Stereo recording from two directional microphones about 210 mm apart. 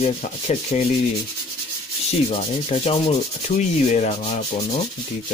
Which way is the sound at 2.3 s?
30° left (ahead or behind).